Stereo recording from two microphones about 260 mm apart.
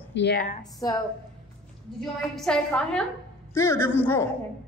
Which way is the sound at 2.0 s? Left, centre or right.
Centre.